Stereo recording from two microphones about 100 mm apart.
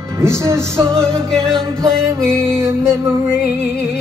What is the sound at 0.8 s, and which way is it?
Music, 5° left (ahead or behind).